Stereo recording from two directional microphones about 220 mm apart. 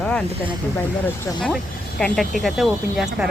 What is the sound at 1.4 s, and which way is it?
Speech, 5° left (ahead or behind).